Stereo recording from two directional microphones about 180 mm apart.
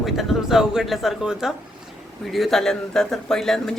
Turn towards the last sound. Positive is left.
turn(degrees=0)  # may be behind; listen again after turning